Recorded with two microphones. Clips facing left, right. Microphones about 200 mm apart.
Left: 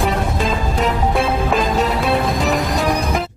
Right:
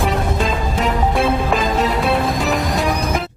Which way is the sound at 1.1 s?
Centre (ahead or behind).